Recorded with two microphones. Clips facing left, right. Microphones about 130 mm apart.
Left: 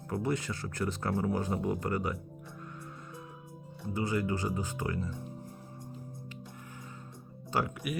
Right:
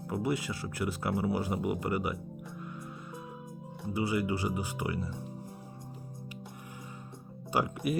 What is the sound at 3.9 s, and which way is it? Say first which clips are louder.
Speech: right 1 dB; 10° right (ahead or behind).